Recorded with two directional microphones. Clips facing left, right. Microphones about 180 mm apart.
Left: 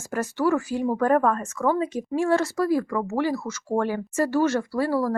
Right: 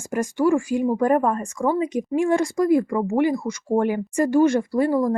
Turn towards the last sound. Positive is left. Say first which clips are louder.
# right 4 dB
turn(degrees=-15)  # may be behind; listen again after turning